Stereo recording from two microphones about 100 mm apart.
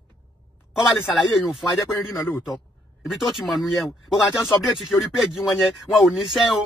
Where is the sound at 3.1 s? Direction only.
Centre (ahead or behind).